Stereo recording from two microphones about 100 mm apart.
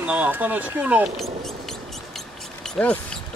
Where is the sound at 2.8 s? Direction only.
10° left (ahead or behind).